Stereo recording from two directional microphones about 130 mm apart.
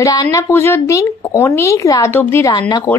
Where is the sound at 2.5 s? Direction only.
30° left (ahead or behind).